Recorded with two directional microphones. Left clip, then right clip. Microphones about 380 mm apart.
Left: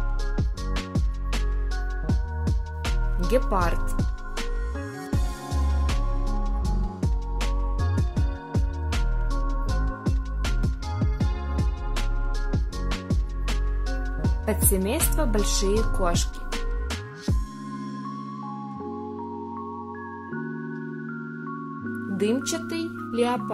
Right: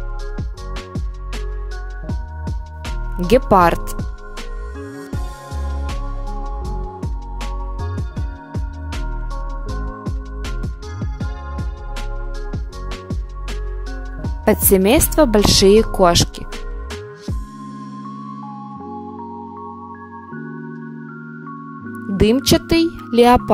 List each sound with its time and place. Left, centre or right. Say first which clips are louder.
0.4 s music: right 1 dB; centre
3.3 s speech: right 12 dB; right
3.9 s music: right 2 dB; centre
14.4 s speech: right 13 dB; right
16.5 s music: left 1 dB; centre
22.1 s speech: right 11 dB; right